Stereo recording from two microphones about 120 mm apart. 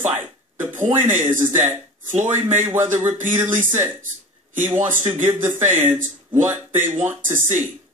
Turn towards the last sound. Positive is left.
turn(degrees=-20)  # may be behind; listen again after turning